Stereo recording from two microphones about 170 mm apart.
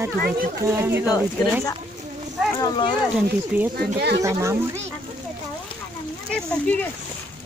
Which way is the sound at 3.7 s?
75° right (ahead or behind).